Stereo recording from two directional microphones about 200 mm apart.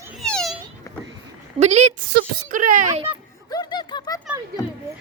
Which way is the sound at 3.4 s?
20° left (ahead or behind).